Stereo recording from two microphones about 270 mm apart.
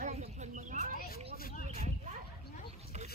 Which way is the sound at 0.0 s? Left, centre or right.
Right.